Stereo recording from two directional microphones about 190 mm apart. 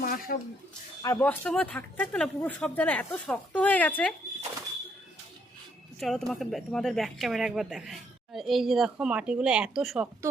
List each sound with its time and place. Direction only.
0.0 s a sound: 50° left (ahead or behind)
1.0 s speech: 15° left (ahead or behind)
6.0 s speech: centre (ahead or behind)